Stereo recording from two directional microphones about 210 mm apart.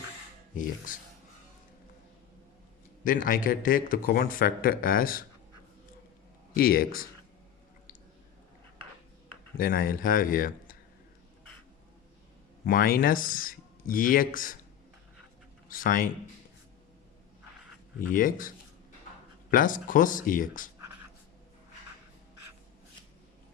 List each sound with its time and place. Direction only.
0.5 s a man's voice: 40° left (ahead or behind)
3.0 s a man's voice: 40° left (ahead or behind)
6.5 s speech: 45° left (ahead or behind)
9.6 s a man's voice: 45° left (ahead or behind)
12.6 s a man's voice: 45° left (ahead or behind)
15.7 s a man's voice: 40° left (ahead or behind)
18.1 s a man's voice: 40° left (ahead or behind)